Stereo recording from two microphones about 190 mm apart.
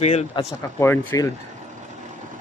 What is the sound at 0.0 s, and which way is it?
Speech, 35° left (ahead or behind).